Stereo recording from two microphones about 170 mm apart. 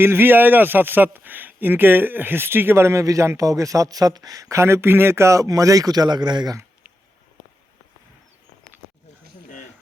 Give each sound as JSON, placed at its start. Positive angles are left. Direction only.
{"t": 0.0, "sound": "speech", "side_deg": -10}